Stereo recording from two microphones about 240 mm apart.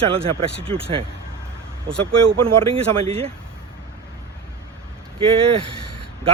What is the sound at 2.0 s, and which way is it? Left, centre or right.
A man's voice, right.